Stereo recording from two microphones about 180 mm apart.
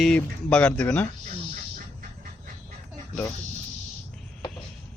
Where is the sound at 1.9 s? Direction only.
50° right (ahead or behind).